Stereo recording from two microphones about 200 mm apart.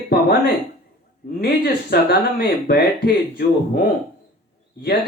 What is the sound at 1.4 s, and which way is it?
Speech, 50° left (ahead or behind).